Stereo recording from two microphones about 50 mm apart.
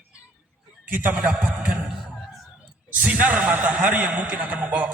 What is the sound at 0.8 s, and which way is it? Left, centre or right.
Speech, right.